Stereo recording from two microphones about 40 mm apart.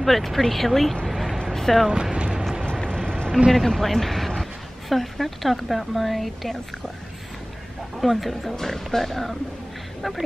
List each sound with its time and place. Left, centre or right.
0.0 s speech: centre
1.0 s a sound: centre
1.4 s a sound: centre
2.1 s music: right
2.6 s vehicle: centre
3.5 s a woman's voice: centre
8.0 s speech: centre